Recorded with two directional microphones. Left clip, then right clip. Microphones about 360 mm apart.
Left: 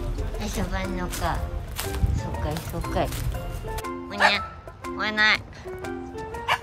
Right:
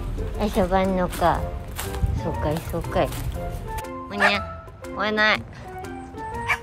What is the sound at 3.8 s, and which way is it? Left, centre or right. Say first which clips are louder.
Music: even; centre.